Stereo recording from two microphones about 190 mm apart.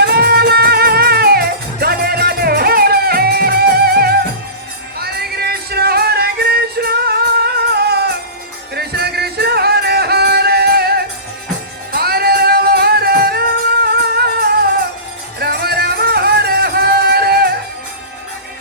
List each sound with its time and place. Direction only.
0.0 s music: 55° right (ahead or behind)